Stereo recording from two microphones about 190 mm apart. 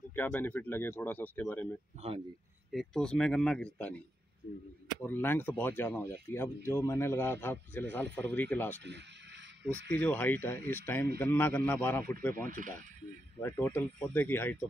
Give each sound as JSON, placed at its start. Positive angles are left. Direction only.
{"t": 0.1, "sound": "speech", "side_deg": 10}
{"t": 2.0, "sound": "speech", "side_deg": -30}
{"t": 2.7, "sound": "speech", "side_deg": 0}
{"t": 5.0, "sound": "speech", "side_deg": 10}
{"t": 9.9, "sound": "speech", "side_deg": 10}
{"t": 12.4, "sound": "speech", "side_deg": -45}
{"t": 13.4, "sound": "speech", "side_deg": 10}